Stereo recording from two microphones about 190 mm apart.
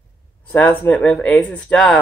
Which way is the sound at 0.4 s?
10° left (ahead or behind).